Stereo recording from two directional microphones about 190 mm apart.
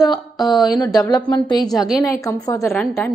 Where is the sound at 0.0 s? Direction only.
20° left (ahead or behind).